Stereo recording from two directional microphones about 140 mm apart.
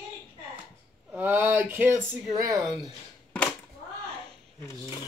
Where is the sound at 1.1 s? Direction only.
15° right (ahead or behind).